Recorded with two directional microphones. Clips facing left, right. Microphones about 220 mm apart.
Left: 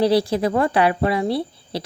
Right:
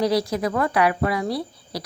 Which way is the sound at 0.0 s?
30° left (ahead or behind).